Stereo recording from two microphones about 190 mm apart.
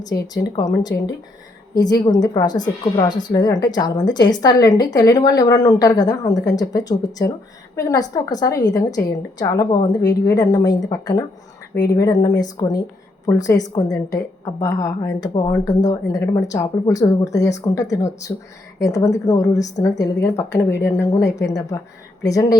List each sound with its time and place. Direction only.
0.4 s a woman's voice: 20° left (ahead or behind)